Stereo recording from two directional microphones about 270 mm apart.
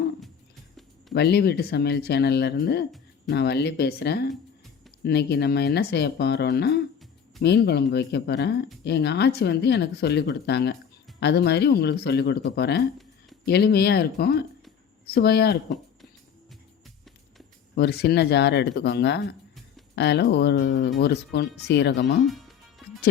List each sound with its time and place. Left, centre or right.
1.1 s speech: left
17.7 s speech: left